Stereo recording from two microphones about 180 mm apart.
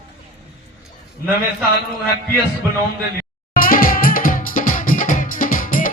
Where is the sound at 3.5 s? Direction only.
50° left (ahead or behind).